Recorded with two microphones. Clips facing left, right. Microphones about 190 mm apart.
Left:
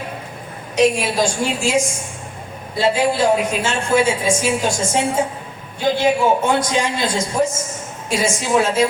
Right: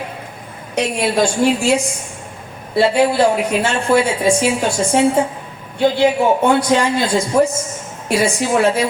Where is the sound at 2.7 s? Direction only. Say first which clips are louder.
Right 4 dB; 65° right (ahead or behind).